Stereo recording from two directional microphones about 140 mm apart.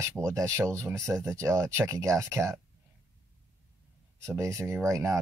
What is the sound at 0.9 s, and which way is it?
Speech, 5° left (ahead or behind).